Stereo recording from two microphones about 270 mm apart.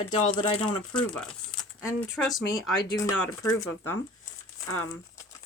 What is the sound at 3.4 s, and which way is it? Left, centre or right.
Speech, centre.